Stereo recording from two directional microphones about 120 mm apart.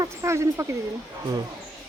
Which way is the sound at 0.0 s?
25° right (ahead or behind).